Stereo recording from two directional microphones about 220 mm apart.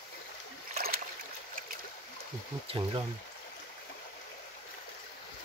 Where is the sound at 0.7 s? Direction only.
40° right (ahead or behind).